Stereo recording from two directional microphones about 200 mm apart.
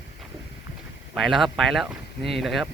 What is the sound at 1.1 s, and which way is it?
Speech, centre (ahead or behind).